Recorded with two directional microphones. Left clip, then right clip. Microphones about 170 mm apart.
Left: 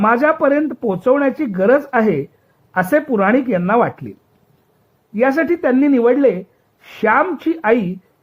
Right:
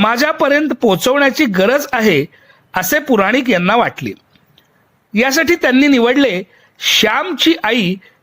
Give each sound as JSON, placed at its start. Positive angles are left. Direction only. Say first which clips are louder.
{"t": 0.0, "sound": "speech", "louder": "even", "side_deg": -35}
{"t": 5.1, "sound": "speech", "louder": "right 2 dB", "side_deg": -40}